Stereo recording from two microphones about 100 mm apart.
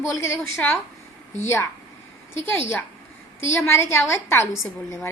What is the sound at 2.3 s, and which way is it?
A woman's voice, 20° left (ahead or behind).